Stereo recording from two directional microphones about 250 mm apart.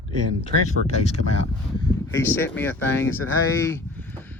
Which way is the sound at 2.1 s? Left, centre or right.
Centre.